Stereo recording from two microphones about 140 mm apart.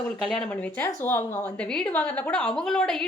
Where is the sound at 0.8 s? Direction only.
15° left (ahead or behind).